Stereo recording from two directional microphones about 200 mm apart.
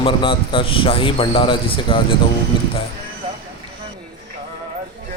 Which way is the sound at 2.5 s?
25° left (ahead or behind).